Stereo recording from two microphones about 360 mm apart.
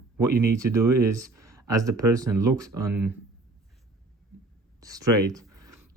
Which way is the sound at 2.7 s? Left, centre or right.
Right.